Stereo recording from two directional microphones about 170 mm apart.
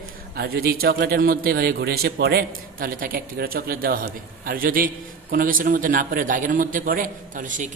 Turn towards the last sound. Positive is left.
turn(degrees=-50)  # may be behind; listen again after turning